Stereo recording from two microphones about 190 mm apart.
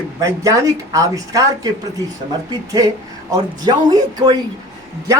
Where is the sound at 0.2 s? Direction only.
15° right (ahead or behind).